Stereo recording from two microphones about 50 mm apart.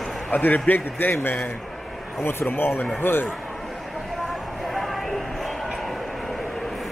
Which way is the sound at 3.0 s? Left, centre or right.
Left.